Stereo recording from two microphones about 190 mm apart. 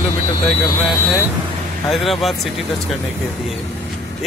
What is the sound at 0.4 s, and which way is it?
Speech, 25° left (ahead or behind).